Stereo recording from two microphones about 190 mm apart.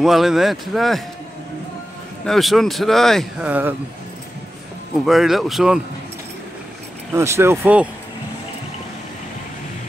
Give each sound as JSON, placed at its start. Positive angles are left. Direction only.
{"t": 0.0, "sound": "speech", "side_deg": 0}
{"t": 2.2, "sound": "speech", "side_deg": 0}
{"t": 5.0, "sound": "speech", "side_deg": 0}
{"t": 7.2, "sound": "speech", "side_deg": -15}